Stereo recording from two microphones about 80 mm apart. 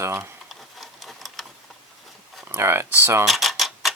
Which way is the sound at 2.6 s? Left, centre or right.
Right.